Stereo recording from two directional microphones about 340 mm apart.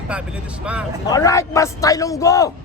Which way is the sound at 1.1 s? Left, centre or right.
Centre.